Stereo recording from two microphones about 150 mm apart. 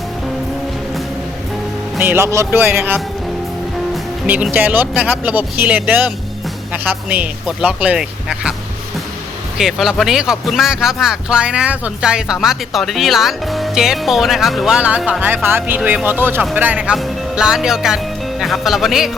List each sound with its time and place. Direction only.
2.0 s speech: 15° right (ahead or behind)
4.5 s speech: 10° right (ahead or behind)
9.6 s speech: centre (ahead or behind)